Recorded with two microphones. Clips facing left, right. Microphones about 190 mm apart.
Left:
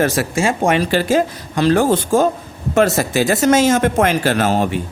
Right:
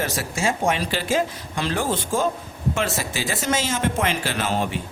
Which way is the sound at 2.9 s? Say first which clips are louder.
Left 11 dB; 55° left (ahead or behind).